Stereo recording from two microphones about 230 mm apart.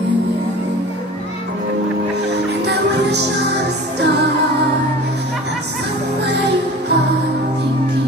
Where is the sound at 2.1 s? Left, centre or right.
Right.